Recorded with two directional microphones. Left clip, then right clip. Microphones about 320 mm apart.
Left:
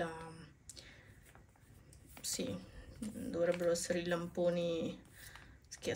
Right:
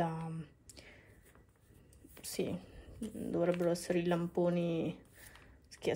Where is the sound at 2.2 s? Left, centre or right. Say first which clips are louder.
Right 2 dB; centre.